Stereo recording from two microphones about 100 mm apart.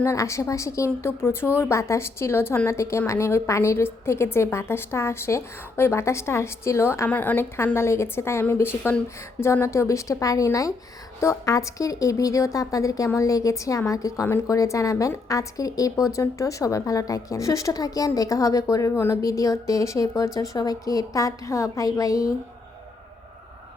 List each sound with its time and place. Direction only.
0.0 s a woman's voice: 30° left (ahead or behind)
7.1 s a woman's voice: 15° left (ahead or behind); by 22.3 s 35° left (ahead or behind)